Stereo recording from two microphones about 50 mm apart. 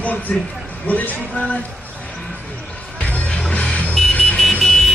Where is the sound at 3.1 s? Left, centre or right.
Left.